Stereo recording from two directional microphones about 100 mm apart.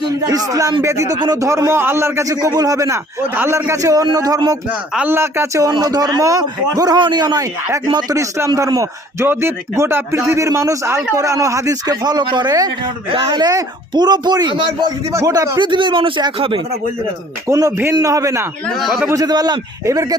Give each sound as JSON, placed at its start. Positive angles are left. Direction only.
{"t": 0.3, "sound": "a man's voice", "side_deg": -35}
{"t": 4.9, "sound": "a man's voice", "side_deg": -25}
{"t": 8.1, "sound": "a man's voice", "side_deg": -30}
{"t": 15.1, "sound": "a man's voice", "side_deg": -35}
{"t": 15.5, "sound": "speech", "side_deg": -50}
{"t": 17.5, "sound": "a man's voice", "side_deg": -30}
{"t": 18.8, "sound": "a man's voice", "side_deg": -5}
{"t": 19.0, "sound": "a man's voice", "side_deg": -40}